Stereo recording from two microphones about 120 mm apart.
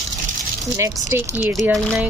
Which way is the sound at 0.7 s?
25° right (ahead or behind).